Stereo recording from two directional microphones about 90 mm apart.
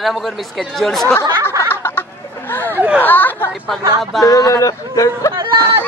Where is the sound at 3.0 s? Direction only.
20° left (ahead or behind).